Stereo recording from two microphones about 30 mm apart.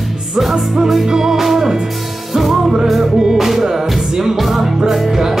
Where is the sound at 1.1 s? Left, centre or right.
Centre.